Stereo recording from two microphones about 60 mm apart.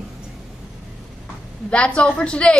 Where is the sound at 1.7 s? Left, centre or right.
Centre.